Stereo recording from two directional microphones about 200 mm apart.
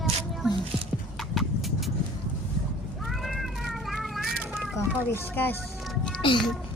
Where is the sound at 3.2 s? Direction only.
Centre (ahead or behind).